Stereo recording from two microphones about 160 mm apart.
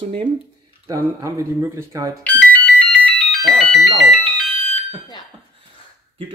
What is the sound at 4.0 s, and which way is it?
Music, centre (ahead or behind).